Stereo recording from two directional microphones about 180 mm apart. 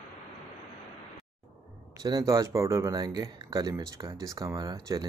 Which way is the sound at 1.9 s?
20° right (ahead or behind).